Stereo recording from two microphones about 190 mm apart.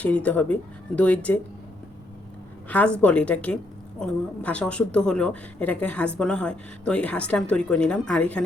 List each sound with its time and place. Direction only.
0.0 s speech: 5° left (ahead or behind)
2.6 s a woman's voice: 10° left (ahead or behind)